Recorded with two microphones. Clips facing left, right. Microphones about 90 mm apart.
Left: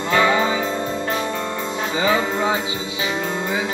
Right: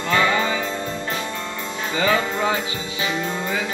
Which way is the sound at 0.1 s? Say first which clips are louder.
Left 2 dB; 20° left (ahead or behind).